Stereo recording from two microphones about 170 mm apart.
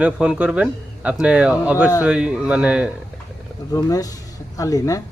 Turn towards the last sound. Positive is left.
turn(degrees=20)  # may be behind; listen again after turning